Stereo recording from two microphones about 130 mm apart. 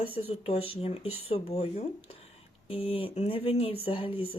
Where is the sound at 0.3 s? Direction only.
50° left (ahead or behind).